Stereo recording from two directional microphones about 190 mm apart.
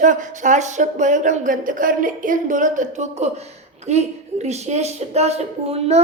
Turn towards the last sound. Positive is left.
turn(degrees=-35)  # may be behind; listen again after turning